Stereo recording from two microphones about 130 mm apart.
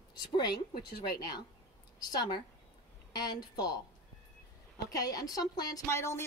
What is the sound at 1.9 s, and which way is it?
A woman's voice, 30° left (ahead or behind).